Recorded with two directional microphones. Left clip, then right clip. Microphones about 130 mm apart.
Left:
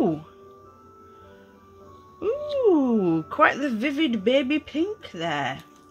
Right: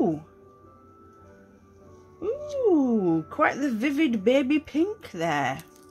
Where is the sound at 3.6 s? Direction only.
10° right (ahead or behind); by 5.6 s 25° right (ahead or behind).